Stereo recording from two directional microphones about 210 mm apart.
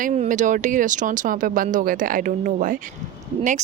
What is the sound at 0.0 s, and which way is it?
Speech, 35° right (ahead or behind).